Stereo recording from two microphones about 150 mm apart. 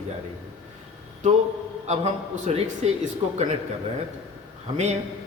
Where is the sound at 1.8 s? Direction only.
50° right (ahead or behind).